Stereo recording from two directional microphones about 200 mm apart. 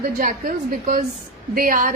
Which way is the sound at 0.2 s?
45° right (ahead or behind).